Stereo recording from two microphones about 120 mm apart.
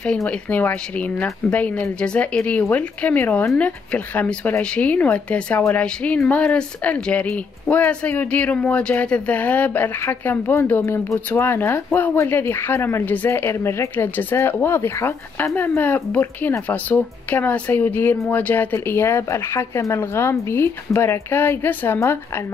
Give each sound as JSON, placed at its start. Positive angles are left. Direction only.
{"t": 0.0, "sound": "speech", "side_deg": 10}